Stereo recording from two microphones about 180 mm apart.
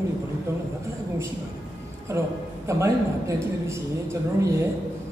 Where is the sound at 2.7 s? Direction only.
15° right (ahead or behind).